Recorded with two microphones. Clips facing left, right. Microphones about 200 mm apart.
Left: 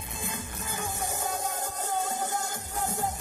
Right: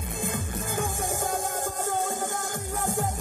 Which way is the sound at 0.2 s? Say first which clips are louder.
Right 6 dB; 50° right (ahead or behind).